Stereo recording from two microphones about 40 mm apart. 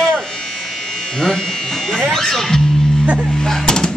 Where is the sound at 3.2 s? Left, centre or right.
Centre.